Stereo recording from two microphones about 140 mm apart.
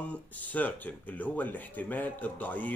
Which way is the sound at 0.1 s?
10° left (ahead or behind).